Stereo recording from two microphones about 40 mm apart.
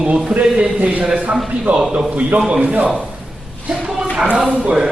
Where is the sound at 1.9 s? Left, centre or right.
Right.